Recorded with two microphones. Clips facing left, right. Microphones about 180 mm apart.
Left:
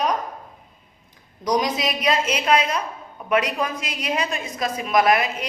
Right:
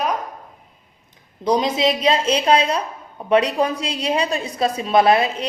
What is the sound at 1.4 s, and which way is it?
A woman's voice, 25° right (ahead or behind).